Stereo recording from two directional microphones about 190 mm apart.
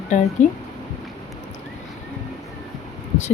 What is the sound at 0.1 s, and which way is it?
Speech, 40° left (ahead or behind).